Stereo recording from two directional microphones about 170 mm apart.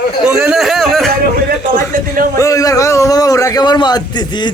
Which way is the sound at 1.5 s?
55° right (ahead or behind).